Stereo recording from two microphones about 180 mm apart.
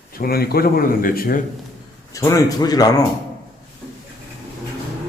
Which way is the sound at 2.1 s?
20° left (ahead or behind).